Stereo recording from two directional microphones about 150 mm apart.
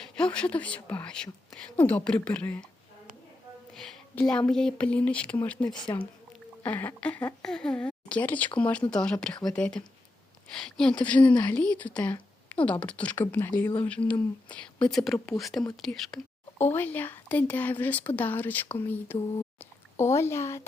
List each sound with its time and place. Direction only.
0.0 s a woman's voice: 5° left (ahead or behind)
3.8 s a sound: centre (ahead or behind)
4.2 s a woman's voice: 5° left (ahead or behind)
14.8 s speech: centre (ahead or behind)
16.6 s a woman's voice: 15° left (ahead or behind)
19.5 s a sound: 15° left (ahead or behind)